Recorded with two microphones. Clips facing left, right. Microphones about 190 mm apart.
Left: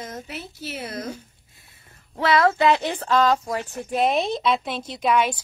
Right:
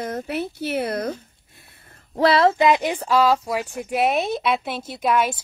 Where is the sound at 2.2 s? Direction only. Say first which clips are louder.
Right 3 dB; 30° right (ahead or behind).